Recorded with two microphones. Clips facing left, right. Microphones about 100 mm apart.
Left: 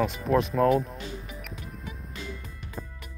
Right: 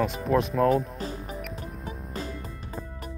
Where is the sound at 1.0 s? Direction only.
40° right (ahead or behind).